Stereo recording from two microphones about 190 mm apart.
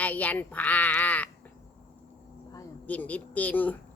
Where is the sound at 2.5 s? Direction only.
10° left (ahead or behind).